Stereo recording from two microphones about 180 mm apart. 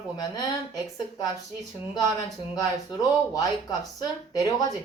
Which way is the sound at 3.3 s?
20° left (ahead or behind).